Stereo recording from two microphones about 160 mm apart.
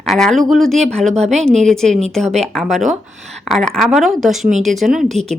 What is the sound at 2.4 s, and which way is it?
Speech, 5° left (ahead or behind).